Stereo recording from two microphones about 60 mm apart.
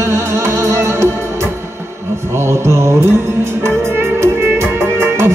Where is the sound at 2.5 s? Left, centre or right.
Right.